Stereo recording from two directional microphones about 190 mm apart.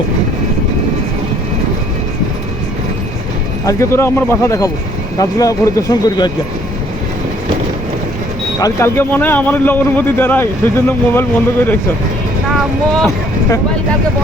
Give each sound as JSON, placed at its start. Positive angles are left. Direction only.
{"t": 3.7, "sound": "a man's voice", "side_deg": 15}
{"t": 8.5, "sound": "a man's voice", "side_deg": 15}